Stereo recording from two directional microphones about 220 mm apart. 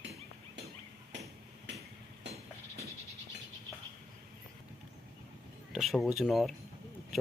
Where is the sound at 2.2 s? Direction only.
55° right (ahead or behind).